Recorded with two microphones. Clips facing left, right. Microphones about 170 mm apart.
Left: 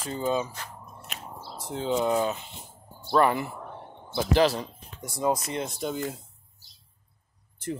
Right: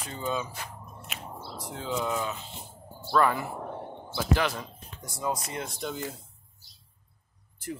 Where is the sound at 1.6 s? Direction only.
25° left (ahead or behind).